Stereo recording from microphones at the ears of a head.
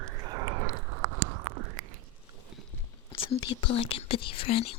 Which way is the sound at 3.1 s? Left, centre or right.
Left.